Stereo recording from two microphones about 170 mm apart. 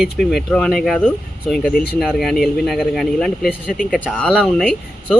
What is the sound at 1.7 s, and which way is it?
Speech, 65° left (ahead or behind).